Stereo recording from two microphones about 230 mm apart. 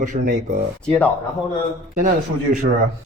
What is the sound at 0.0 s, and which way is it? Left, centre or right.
Speech, right.